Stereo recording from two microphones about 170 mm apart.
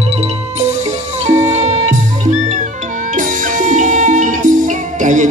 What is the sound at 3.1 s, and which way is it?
Music, 50° right (ahead or behind).